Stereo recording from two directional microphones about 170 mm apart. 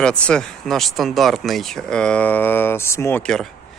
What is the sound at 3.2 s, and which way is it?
Speech, 5° left (ahead or behind).